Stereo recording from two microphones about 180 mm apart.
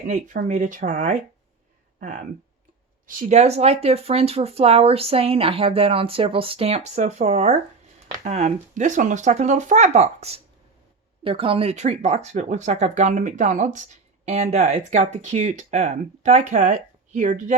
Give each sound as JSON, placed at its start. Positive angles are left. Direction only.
{"t": 0.1, "sound": "speech", "side_deg": -45}